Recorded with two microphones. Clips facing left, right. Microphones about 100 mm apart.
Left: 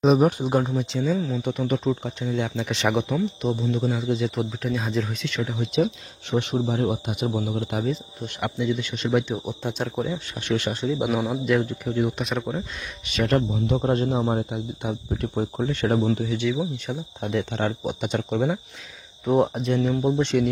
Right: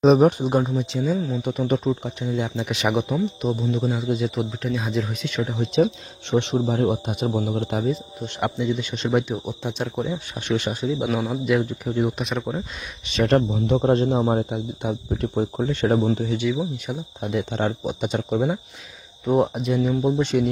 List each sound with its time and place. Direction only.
0.0 s speech: 35° right (ahead or behind)
0.3 s speech: 15° right (ahead or behind)
0.6 s speech: centre (ahead or behind)
4.4 s speech: centre (ahead or behind)
5.2 s speech: 20° right (ahead or behind)
9.2 s speech: centre (ahead or behind)
10.1 s speech: 15° right (ahead or behind)
10.8 s speech: 5° left (ahead or behind)
11.6 s speech: 15° right (ahead or behind)
12.2 s speech: centre (ahead or behind)
13.1 s speech: 25° right (ahead or behind)
16.5 s speech: 5° right (ahead or behind)
17.5 s speech: 20° right (ahead or behind)
19.2 s speech: centre (ahead or behind)